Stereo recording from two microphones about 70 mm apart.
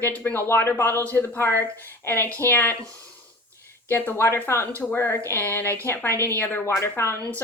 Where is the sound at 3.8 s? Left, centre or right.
Left.